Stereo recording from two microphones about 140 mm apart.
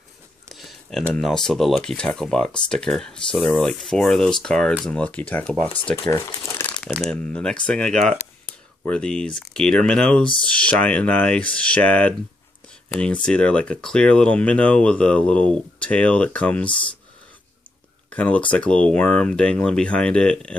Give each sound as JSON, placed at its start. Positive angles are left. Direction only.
{"t": 0.5, "sound": "a sound", "side_deg": 0}
{"t": 1.1, "sound": "speech", "side_deg": 5}
{"t": 6.0, "sound": "speech", "side_deg": 20}
{"t": 6.8, "sound": "speech", "side_deg": 5}
{"t": 18.1, "sound": "speech", "side_deg": 10}